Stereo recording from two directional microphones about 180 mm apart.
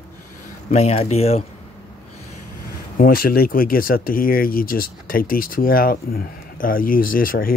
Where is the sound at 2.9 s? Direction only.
55° left (ahead or behind).